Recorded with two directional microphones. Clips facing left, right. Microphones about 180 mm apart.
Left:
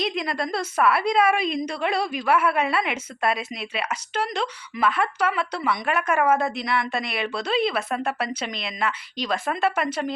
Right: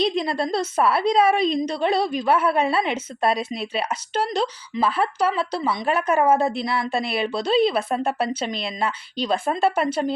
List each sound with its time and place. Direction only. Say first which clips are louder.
0.0 s a woman's voice: right 4 dB; 30° right (ahead or behind)